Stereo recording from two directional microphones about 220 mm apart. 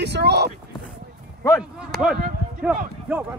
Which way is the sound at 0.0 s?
50° right (ahead or behind).